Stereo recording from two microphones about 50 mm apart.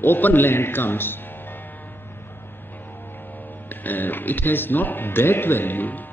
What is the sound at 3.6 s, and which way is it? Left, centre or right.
Speech, left.